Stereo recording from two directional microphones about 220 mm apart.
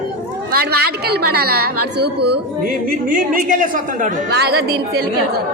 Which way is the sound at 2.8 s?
40° right (ahead or behind).